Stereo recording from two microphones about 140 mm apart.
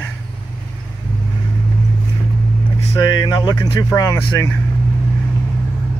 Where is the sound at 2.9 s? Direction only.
30° left (ahead or behind).